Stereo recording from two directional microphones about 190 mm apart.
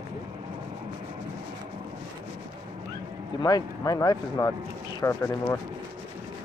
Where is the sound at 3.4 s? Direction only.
20° left (ahead or behind).